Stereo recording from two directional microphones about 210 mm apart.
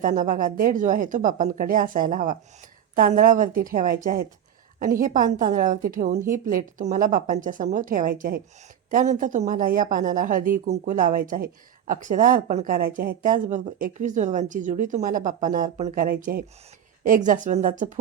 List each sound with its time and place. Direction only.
0.0 s speech: 40° right (ahead or behind)